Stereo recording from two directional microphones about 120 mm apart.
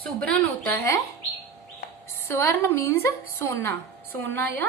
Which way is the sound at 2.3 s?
20° left (ahead or behind).